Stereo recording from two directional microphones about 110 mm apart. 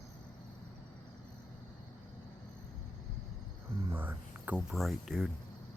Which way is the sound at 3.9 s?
15° right (ahead or behind).